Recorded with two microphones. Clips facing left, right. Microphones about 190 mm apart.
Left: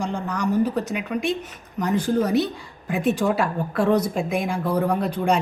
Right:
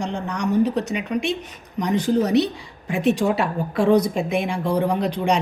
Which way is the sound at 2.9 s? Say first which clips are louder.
Right 2 dB; centre (ahead or behind).